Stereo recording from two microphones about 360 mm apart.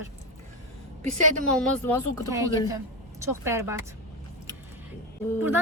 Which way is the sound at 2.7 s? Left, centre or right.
Centre.